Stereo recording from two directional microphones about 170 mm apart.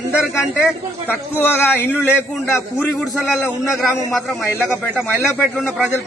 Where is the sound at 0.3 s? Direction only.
15° left (ahead or behind).